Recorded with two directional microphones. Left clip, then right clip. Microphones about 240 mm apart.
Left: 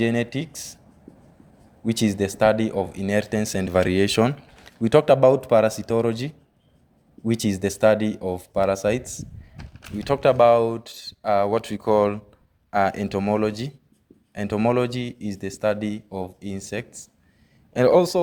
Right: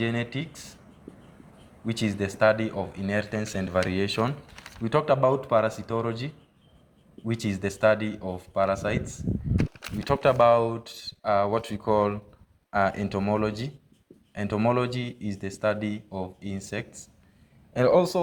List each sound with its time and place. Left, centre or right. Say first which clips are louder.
0.0 s speech: left 6 dB; left
1.8 s speech: left 6 dB; left
9.6 s a sound: right 7 dB; right
10.0 s speech: left 4 dB; left